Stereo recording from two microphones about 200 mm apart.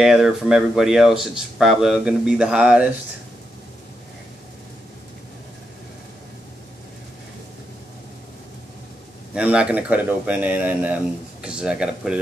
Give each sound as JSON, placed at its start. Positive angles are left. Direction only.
{"t": 0.0, "sound": "speech", "side_deg": -5}
{"t": 9.3, "sound": "speech", "side_deg": -5}